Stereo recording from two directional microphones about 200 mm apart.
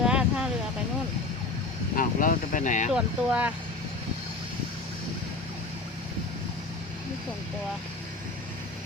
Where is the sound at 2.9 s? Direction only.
5° right (ahead or behind).